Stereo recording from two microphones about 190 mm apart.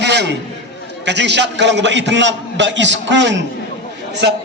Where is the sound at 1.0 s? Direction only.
65° right (ahead or behind).